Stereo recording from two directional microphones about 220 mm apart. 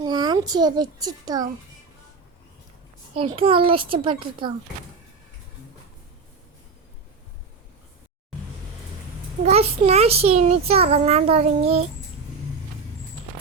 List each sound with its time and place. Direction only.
0.0 s a child's voice: 20° right (ahead or behind)
3.2 s a child's voice: 25° right (ahead or behind)
9.5 s a child's voice: 25° right (ahead or behind)